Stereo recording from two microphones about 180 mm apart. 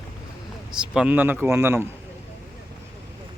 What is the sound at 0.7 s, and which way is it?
A man's voice, 5° right (ahead or behind).